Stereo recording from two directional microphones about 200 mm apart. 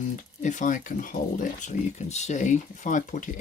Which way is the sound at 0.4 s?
40° left (ahead or behind).